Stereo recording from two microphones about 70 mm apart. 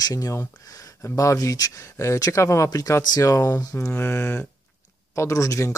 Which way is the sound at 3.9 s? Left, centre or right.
Left.